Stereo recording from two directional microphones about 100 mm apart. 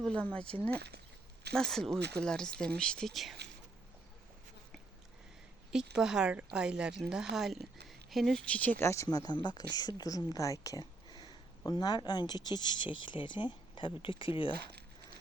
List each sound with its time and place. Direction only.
0.0 s speech: 10° left (ahead or behind)
1.5 s speech: 5° left (ahead or behind)
5.7 s speech: 5° right (ahead or behind); by 8.7 s 10° left (ahead or behind)
8.8 s speech: 30° left (ahead or behind)
9.0 s speech: 45° left (ahead or behind)
11.1 s speech: 50° left (ahead or behind)